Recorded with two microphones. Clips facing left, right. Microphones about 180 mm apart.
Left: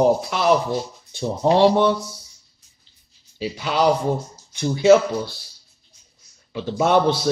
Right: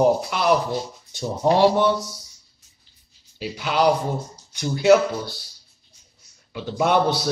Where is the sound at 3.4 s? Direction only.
5° right (ahead or behind).